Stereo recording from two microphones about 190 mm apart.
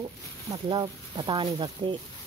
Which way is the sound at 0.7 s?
25° right (ahead or behind).